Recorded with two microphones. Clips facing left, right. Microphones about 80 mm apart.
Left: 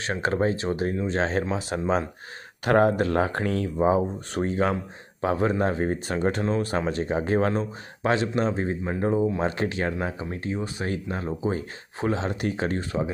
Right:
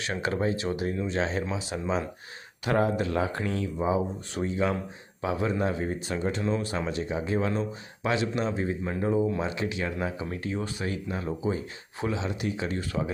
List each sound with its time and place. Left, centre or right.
0.0 s speech: left
3.8 s speech: left
9.4 s speech: left
10.8 s speech: left
12.9 s speech: left